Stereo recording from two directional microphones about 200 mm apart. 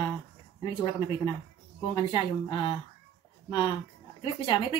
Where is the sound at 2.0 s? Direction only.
25° left (ahead or behind).